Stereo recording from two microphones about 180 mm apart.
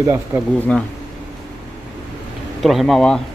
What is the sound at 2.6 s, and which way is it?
Speech, centre (ahead or behind).